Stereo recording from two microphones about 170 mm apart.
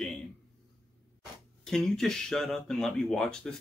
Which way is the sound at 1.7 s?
5° left (ahead or behind).